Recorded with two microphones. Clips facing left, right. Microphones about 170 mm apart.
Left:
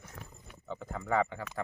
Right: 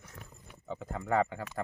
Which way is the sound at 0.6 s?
5° right (ahead or behind).